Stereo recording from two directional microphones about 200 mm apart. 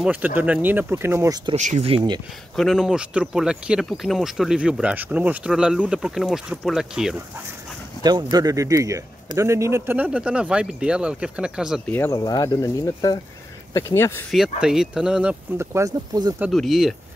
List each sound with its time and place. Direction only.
0.0 s speech: 10° right (ahead or behind)
1.5 s speech: 35° right (ahead or behind)
2.5 s speech: centre (ahead or behind)
8.0 s speech: 20° right (ahead or behind); by 11.8 s 5° right (ahead or behind)
11.9 s speech: 15° left (ahead or behind)
14.6 s speech: 5° right (ahead or behind)
16.3 s speech: centre (ahead or behind)